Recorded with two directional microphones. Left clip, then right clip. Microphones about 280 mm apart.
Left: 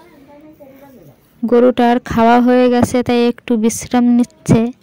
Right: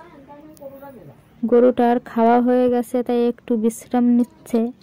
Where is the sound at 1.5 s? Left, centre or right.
Left.